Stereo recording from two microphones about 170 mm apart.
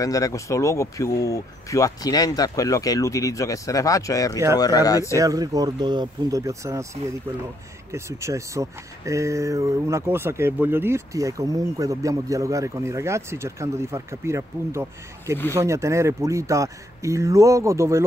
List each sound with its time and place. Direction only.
0.0 s speech: 20° left (ahead or behind)
5.2 s speech: 20° right (ahead or behind)
7.9 s speech: 15° right (ahead or behind)